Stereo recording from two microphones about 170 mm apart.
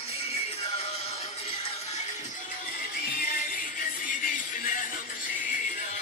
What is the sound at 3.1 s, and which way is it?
Music, 55° left (ahead or behind).